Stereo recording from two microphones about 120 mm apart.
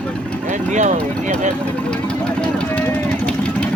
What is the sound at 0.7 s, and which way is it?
Speech, 80° right.